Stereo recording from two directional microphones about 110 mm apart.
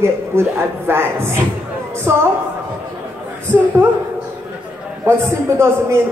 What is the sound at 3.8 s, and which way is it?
Speech, 20° right (ahead or behind).